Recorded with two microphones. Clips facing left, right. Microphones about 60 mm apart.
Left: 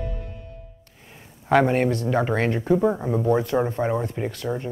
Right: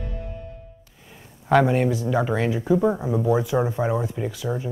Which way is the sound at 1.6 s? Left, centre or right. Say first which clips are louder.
Even; left.